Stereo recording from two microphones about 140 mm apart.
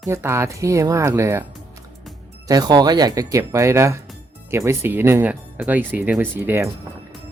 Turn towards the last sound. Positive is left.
turn(degrees=-20)  # may be behind; listen again after turning